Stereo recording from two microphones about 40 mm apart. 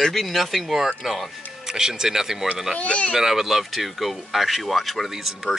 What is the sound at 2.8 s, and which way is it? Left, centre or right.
Speech, left.